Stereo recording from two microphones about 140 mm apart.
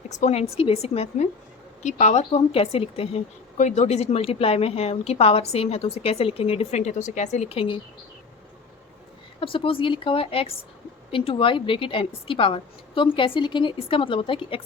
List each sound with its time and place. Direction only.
0.1 s a woman's voice: 55° left (ahead or behind)
3.6 s a woman's voice: 55° left (ahead or behind)
9.4 s a woman's voice: 40° left (ahead or behind)